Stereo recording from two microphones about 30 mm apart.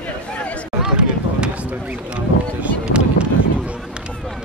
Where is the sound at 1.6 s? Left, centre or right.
Right.